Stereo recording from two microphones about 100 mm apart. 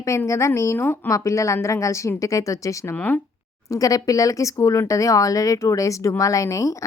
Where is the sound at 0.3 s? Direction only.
30° left (ahead or behind).